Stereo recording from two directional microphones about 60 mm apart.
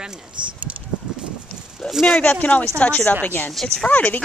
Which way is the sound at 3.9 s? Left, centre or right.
Left.